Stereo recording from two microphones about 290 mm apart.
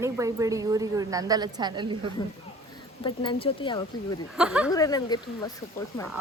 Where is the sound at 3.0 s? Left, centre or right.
Centre.